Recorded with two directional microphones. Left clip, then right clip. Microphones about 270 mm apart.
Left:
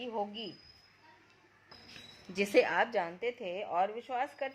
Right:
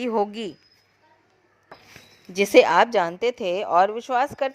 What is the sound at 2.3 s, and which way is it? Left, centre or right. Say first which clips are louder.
A woman's voice: right 13 dB; right.